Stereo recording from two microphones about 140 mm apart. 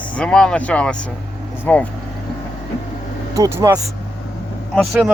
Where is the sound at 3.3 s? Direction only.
25° right (ahead or behind).